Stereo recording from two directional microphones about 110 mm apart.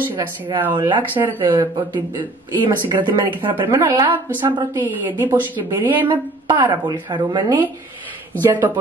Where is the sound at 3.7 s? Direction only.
25° right (ahead or behind).